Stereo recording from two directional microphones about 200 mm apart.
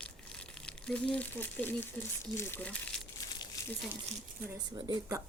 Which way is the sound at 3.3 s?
15° left (ahead or behind).